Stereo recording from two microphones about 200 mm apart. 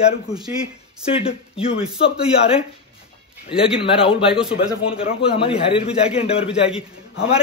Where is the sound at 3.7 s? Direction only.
25° left (ahead or behind).